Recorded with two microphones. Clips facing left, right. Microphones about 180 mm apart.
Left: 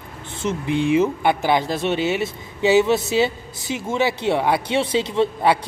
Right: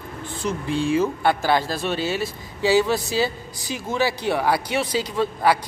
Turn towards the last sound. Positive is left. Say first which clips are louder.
# left 2 dB
turn(degrees=25)  # may be behind; listen again after turning